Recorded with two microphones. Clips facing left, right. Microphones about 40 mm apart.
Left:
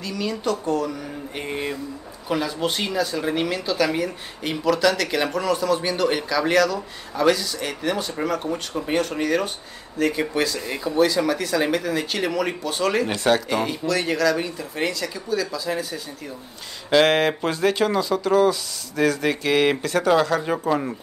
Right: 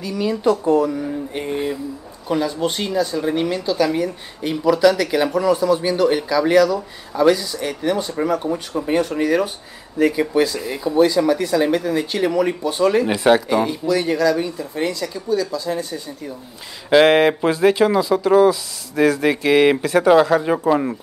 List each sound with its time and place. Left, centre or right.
0.0 s speech: centre
1.4 s a sound: centre
2.2 s speech: centre
3.2 s a sound: centre
3.4 s speech: centre
4.6 s speech: centre
10.0 s speech: centre
16.9 s speech: centre